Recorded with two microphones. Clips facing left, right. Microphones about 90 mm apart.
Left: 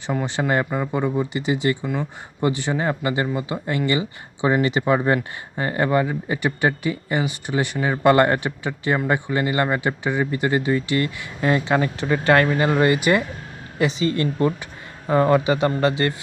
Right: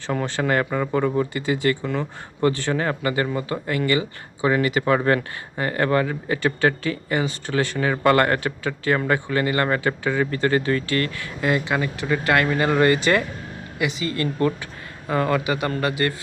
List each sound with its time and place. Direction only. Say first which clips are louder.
0.1 s speech: even; 15° left (ahead or behind); by 12.5 s 30° left (ahead or behind)
12.5 s speech: even; 20° left (ahead or behind)
13.7 s speech: left 4 dB; 30° left (ahead or behind)